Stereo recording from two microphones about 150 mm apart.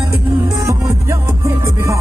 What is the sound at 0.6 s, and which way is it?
Music, 20° right (ahead or behind).